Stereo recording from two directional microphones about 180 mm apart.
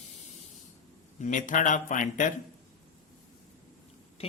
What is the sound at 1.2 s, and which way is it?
A man's voice, 45° left (ahead or behind).